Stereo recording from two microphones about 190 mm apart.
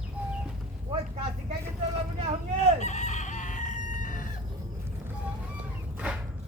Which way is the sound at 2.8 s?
40° left (ahead or behind).